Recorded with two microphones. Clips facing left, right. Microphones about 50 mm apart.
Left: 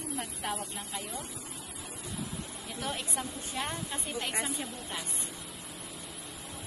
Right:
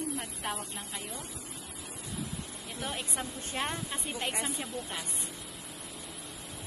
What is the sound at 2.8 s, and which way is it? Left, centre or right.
Speech, centre.